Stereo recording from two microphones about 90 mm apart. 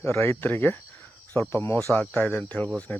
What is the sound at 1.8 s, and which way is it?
Speech, 10° left (ahead or behind).